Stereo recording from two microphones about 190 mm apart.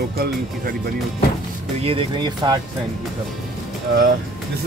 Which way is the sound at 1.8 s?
25° right (ahead or behind).